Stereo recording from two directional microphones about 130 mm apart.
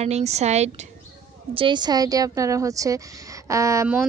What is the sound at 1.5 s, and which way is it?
A woman's voice, 35° right (ahead or behind).